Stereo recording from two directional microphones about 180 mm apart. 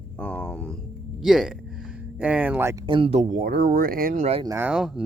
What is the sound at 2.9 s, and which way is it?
Speech, 30° right (ahead or behind).